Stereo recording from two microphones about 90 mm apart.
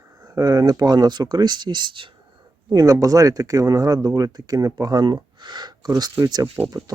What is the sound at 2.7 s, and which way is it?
Speech, 40° right (ahead or behind).